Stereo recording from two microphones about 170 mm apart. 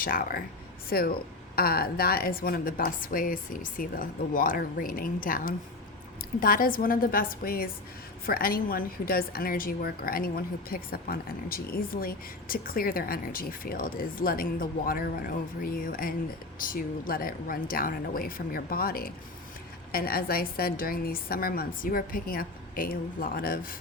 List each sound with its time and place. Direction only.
0.0 s speech: 55° left (ahead or behind)